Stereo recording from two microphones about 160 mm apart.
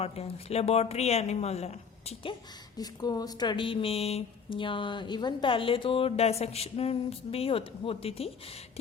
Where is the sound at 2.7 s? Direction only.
25° left (ahead or behind).